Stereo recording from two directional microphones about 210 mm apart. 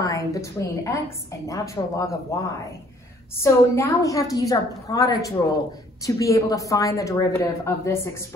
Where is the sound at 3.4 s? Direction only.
15° left (ahead or behind).